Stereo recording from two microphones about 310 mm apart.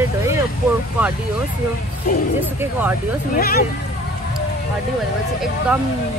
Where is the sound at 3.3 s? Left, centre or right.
Left.